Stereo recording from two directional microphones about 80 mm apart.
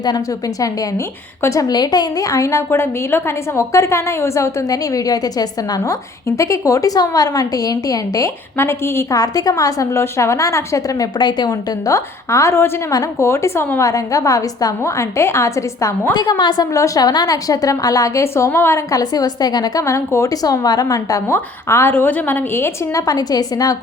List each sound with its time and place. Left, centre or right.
0.6 s a woman's voice: left
1.6 s a woman's voice: left
8.5 s a woman's voice: left
9.1 s a woman's voice: left
11.9 s a woman's voice: left
13.8 s a woman's voice: left
16.4 s a woman's voice: left
16.7 s a woman's voice: left
18.9 s a woman's voice: left
19.8 s a woman's voice: left
21.2 s a woman's voice: left
23.0 s a woman's voice: left